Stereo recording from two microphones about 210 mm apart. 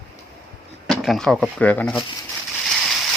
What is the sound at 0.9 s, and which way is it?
Speech, centre (ahead or behind).